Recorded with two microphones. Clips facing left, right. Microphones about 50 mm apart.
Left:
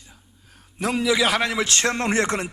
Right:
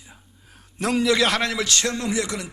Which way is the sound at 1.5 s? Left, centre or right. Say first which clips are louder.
Left 2 dB; left.